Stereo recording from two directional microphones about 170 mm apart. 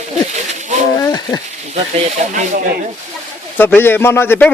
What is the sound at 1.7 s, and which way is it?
Speech, 40° right (ahead or behind).